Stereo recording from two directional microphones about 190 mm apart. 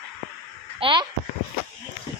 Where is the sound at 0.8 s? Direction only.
25° right (ahead or behind).